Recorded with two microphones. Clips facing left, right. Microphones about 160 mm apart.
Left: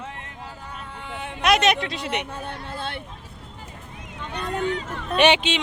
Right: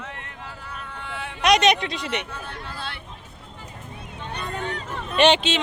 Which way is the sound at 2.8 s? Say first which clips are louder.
Left 6 dB; 50° left (ahead or behind).